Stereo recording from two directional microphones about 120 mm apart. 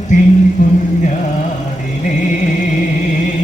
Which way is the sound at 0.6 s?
90° left.